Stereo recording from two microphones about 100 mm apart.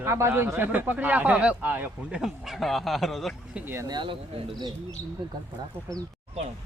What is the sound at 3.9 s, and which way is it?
Speech, 50° right (ahead or behind).